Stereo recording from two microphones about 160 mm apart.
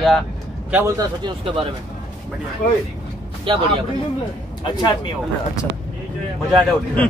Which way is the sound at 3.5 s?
35° right (ahead or behind).